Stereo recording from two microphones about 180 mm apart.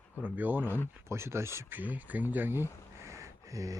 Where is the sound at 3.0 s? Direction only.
15° right (ahead or behind).